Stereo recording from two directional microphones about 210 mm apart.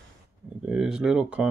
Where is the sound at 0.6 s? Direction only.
5° right (ahead or behind).